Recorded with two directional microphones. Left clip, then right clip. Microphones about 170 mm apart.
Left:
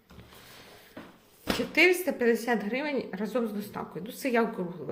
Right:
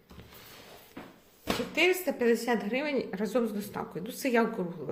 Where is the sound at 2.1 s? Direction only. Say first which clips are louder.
Left 1 dB; 10° left (ahead or behind).